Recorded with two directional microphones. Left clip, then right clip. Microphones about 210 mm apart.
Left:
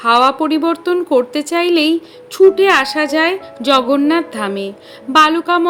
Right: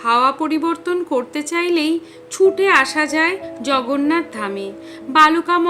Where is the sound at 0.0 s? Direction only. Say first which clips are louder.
Left 4 dB; 20° left (ahead or behind).